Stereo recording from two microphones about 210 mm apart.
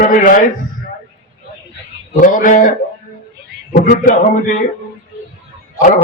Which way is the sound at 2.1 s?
40° left (ahead or behind).